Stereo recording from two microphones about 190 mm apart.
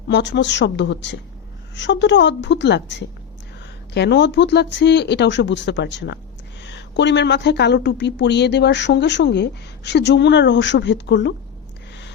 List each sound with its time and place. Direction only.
0.1 s a woman's voice: 65° left (ahead or behind)